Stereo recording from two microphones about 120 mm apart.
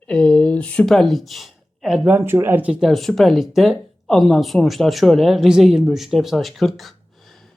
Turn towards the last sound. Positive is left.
turn(degrees=0)  # may be behind; listen again after turning